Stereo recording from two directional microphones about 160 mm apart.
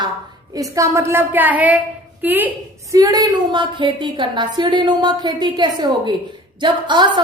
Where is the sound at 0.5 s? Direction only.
20° right (ahead or behind).